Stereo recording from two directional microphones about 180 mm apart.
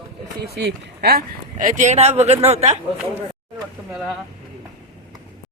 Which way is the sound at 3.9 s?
5° right (ahead or behind).